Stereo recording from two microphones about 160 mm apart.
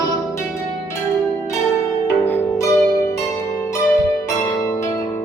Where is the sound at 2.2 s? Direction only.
15° left (ahead or behind).